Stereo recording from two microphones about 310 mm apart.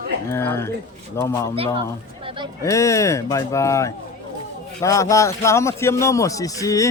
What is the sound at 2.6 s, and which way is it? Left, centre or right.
A man's voice, centre.